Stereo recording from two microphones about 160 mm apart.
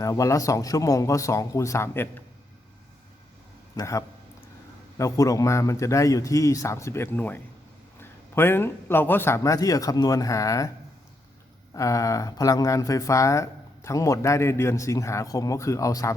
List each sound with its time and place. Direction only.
0.0 s speech: 20° left (ahead or behind)
3.8 s speech: 20° left (ahead or behind)
11.7 s speech: 20° left (ahead or behind)